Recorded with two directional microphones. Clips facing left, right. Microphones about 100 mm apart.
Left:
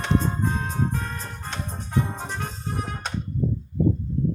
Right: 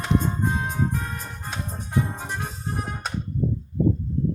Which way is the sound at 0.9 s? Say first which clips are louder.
Even; 10° right (ahead or behind).